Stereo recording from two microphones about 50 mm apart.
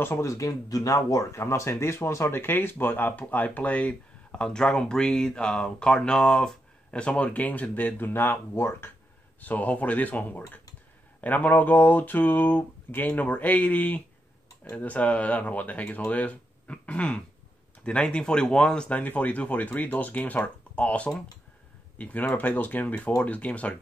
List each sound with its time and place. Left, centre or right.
0.2 s speech: left
1.1 s speech: left
4.4 s speech: centre
7.3 s speech: left
9.4 s speech: left; by 18.9 s centre
18.9 s speech: left